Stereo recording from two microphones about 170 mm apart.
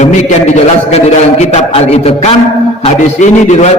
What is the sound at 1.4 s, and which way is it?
A man's voice, 40° left (ahead or behind).